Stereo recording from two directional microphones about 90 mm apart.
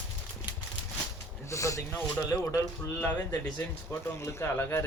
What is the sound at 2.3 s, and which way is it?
Speech, 35° left (ahead or behind).